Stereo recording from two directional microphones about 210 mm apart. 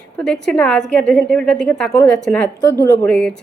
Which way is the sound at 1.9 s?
15° left (ahead or behind).